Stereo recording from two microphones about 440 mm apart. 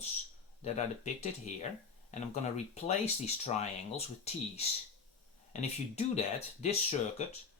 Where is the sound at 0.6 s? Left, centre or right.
Centre.